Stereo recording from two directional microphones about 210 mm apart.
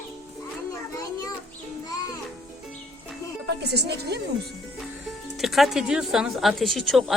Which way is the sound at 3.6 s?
50° right (ahead or behind).